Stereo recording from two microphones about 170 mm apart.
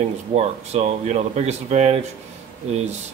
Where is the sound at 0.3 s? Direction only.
40° right (ahead or behind).